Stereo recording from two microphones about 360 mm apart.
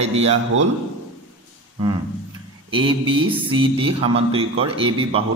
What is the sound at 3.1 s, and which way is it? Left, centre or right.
Speech, centre.